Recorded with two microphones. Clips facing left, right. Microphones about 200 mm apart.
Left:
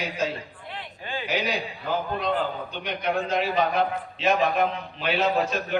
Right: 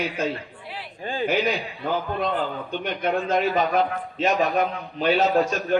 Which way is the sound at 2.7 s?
50° right (ahead or behind).